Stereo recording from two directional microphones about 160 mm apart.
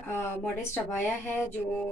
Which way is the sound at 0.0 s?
15° left (ahead or behind).